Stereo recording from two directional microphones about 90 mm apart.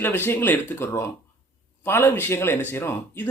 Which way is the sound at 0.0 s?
25° left (ahead or behind).